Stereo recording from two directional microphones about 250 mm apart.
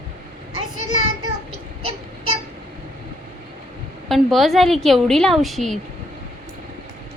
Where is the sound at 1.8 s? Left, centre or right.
Right.